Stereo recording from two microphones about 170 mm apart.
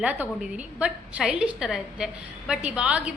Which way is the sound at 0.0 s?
10° right (ahead or behind).